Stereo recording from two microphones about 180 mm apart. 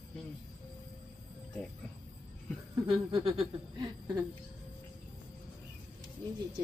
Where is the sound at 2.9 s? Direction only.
30° right (ahead or behind).